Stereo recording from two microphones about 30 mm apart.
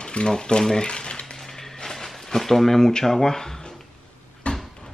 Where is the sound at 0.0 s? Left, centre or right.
Left.